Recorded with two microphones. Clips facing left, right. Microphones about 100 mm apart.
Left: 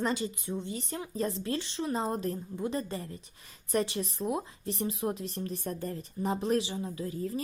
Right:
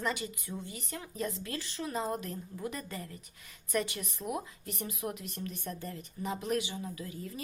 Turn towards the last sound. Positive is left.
turn(degrees=35)  # may be behind; listen again after turning